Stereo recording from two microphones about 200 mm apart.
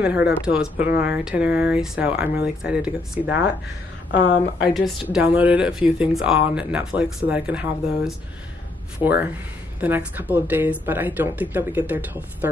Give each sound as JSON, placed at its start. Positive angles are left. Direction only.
{"t": 0.0, "sound": "speech", "side_deg": -10}
{"t": 4.1, "sound": "a woman's voice", "side_deg": 60}
{"t": 5.1, "sound": "speech", "side_deg": -10}
{"t": 9.8, "sound": "speech", "side_deg": -10}